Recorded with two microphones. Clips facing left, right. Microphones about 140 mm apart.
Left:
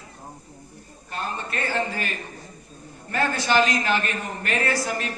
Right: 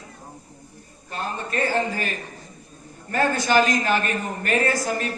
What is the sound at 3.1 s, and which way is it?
A man's voice, 40° right (ahead or behind).